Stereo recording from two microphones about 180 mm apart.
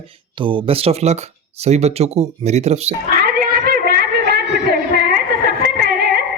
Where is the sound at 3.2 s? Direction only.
55° right (ahead or behind).